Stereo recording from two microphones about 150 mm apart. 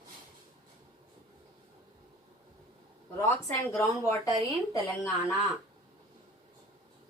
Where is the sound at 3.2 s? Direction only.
15° left (ahead or behind).